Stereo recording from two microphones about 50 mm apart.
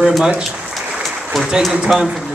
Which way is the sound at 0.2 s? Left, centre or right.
Centre.